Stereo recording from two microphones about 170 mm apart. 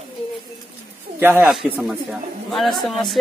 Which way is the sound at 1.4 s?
Centre (ahead or behind).